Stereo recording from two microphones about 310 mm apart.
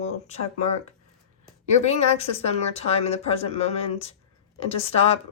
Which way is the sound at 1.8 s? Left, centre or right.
Centre.